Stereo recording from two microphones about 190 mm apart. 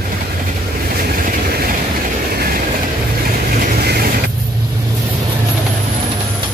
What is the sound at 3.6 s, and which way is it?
Vehicle, 55° right (ahead or behind).